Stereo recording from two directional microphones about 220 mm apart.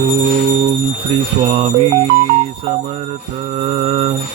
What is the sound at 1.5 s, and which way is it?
Mantra, 25° right (ahead or behind).